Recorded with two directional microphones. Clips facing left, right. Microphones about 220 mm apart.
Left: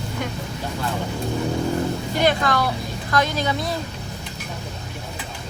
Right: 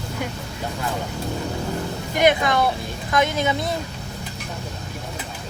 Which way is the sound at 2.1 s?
20° right (ahead or behind).